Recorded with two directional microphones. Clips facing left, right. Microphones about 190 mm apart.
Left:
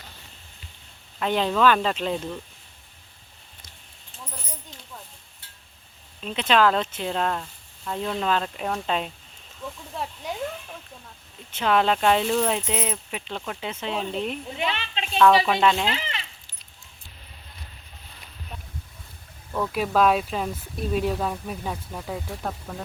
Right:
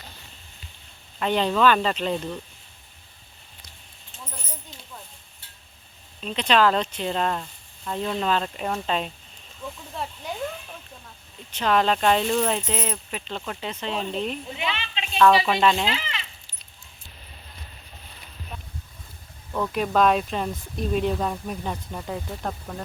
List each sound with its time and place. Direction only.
1.2 s speech: 5° left (ahead or behind)
6.1 s speech: 5° left (ahead or behind)
11.5 s speech: 10° left (ahead or behind)
14.6 s a sound: 40° left (ahead or behind)
15.2 s speech: centre (ahead or behind)
15.9 s speech: 45° left (ahead or behind)
19.5 s speech: 5° left (ahead or behind)